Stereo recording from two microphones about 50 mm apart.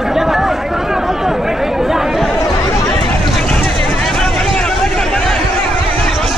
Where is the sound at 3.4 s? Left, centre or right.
Left.